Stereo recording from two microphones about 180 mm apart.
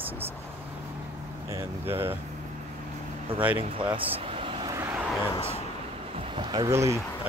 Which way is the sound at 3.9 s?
30° right (ahead or behind).